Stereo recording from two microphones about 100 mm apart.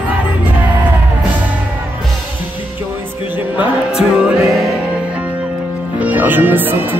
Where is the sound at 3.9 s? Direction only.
10° right (ahead or behind).